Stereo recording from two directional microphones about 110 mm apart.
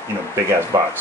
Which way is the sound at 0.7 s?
35° right (ahead or behind).